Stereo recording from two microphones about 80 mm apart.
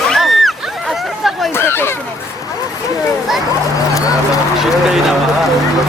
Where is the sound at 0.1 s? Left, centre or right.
Centre.